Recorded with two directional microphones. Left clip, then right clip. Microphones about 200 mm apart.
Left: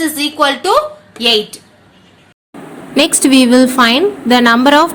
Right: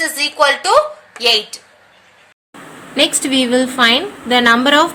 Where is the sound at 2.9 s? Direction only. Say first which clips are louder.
Left 4 dB; 25° left (ahead or behind).